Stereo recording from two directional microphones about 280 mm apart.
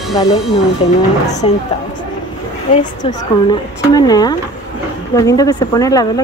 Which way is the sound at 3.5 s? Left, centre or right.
Centre.